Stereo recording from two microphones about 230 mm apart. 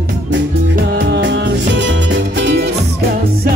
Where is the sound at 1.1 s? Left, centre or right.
Right.